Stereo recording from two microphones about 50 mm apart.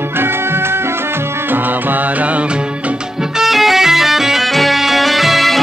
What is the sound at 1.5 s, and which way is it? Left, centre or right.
Music, right.